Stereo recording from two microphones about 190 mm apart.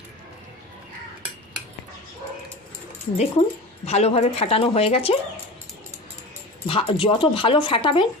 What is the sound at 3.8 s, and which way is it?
Speech, 35° left (ahead or behind).